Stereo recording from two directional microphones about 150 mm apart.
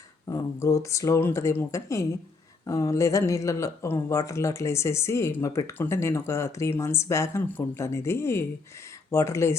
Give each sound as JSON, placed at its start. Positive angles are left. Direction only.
{"t": 0.3, "sound": "speech", "side_deg": 20}